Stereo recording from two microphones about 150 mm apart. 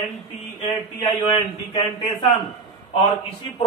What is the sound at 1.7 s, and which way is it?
Speech, 30° left (ahead or behind).